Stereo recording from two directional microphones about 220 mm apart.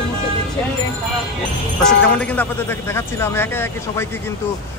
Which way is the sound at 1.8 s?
5° left (ahead or behind).